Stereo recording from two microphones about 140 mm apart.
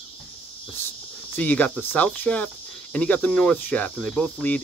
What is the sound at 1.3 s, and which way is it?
Speech, 10° left (ahead or behind).